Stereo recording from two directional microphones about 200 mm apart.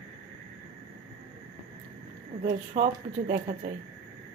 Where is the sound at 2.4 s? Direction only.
40° right (ahead or behind).